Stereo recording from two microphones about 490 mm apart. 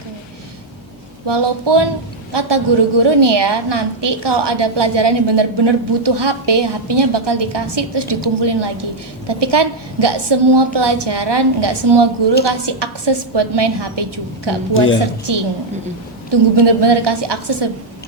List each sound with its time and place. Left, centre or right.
1.3 s a woman's voice: right
14.7 s a woman's voice: left
16.3 s a woman's voice: right